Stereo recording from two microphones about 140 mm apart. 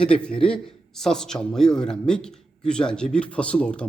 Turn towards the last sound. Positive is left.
turn(degrees=5)  # may be behind; listen again after turning